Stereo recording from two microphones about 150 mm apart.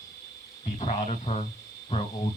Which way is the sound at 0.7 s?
45° left (ahead or behind).